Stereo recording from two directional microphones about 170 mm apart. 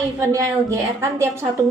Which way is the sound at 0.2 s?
20° right (ahead or behind).